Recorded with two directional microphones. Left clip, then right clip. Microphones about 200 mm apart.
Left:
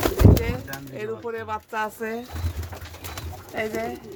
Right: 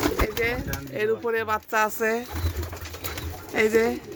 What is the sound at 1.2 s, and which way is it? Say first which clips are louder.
Speech: right 5 dB; 30° right (ahead or behind).